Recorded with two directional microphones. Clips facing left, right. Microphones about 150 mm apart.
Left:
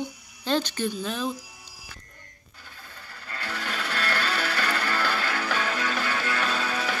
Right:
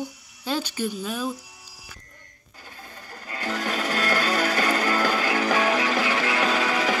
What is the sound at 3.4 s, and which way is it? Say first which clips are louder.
Music: right 6 dB; 45° right (ahead or behind).